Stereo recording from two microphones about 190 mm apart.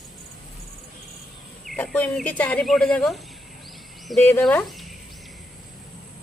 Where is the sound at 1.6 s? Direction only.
5° left (ahead or behind).